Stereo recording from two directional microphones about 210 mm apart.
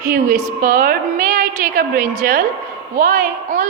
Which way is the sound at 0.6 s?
40° right (ahead or behind).